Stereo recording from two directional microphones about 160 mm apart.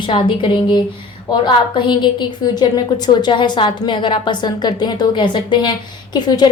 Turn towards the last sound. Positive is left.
turn(degrees=25)  # may be behind; listen again after turning